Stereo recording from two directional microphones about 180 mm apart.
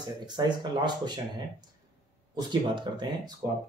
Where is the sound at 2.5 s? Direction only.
25° right (ahead or behind).